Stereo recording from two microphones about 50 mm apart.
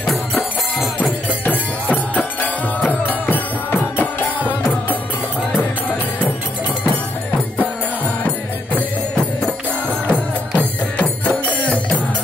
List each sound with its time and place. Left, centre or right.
0.0 s music: centre
1.4 s music: left
8.7 s music: left